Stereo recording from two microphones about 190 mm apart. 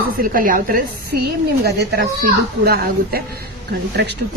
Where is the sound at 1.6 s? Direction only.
60° right (ahead or behind).